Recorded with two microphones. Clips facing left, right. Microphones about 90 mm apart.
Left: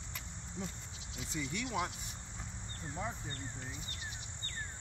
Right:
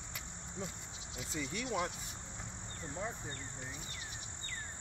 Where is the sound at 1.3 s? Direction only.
35° right (ahead or behind).